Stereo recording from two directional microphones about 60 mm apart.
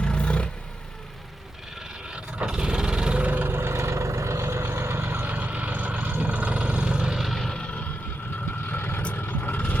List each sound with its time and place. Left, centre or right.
0.0 s vehicle: centre
2.4 s vehicle: centre
7.2 s vehicle: centre
7.6 s vehicle: centre
8.7 s vehicle: left
9.0 s vehicle: left